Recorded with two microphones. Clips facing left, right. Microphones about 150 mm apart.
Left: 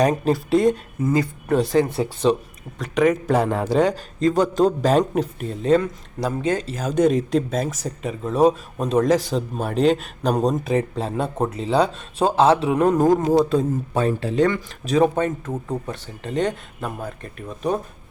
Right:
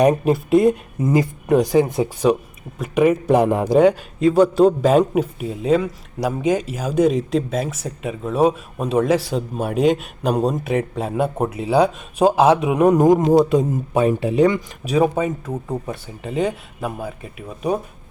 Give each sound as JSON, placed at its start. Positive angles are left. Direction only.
{"t": 0.0, "sound": "speech", "side_deg": -10}
{"t": 1.0, "sound": "speech", "side_deg": -20}